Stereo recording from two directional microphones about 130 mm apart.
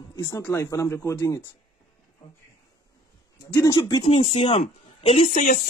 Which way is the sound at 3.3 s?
25° left (ahead or behind).